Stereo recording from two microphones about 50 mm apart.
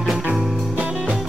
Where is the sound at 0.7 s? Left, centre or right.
Right.